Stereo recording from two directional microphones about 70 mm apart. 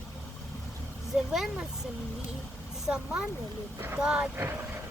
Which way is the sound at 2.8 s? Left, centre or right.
Centre.